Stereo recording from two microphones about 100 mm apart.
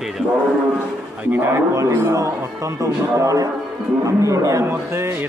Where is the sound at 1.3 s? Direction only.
30° right (ahead or behind).